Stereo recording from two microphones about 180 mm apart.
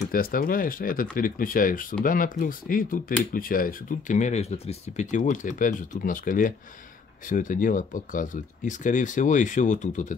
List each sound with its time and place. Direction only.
0.1 s speech: 50° left (ahead or behind)